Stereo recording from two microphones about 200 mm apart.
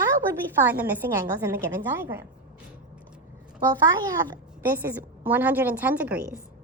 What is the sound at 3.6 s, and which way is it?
A child's voice, 20° right (ahead or behind).